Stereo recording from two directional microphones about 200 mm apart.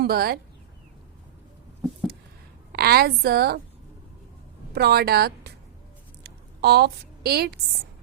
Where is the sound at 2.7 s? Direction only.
50° right (ahead or behind).